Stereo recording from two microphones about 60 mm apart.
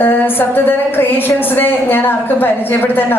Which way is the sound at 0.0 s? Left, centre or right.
Left.